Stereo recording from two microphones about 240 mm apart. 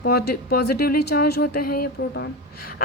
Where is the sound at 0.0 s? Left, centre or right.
Left.